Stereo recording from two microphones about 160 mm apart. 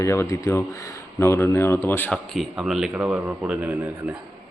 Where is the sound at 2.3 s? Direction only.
5° right (ahead or behind).